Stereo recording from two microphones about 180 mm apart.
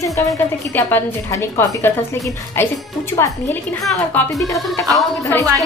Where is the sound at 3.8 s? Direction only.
Centre (ahead or behind).